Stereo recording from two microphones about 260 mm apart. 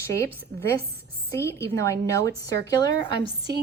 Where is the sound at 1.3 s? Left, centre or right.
Centre.